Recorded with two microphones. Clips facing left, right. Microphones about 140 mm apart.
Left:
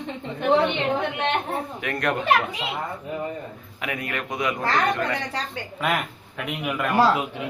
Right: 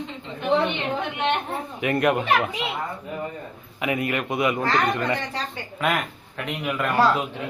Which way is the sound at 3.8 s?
5° right (ahead or behind).